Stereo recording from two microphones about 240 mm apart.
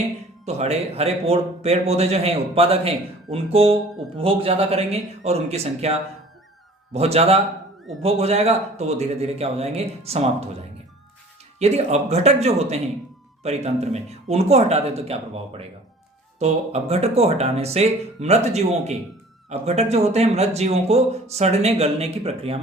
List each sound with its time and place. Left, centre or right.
0.4 s speech: right
11.6 s speech: right